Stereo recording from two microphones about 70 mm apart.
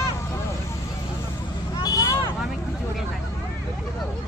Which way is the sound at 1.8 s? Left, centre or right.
Left.